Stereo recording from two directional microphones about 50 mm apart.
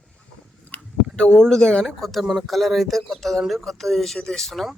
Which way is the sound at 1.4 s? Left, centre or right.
Centre.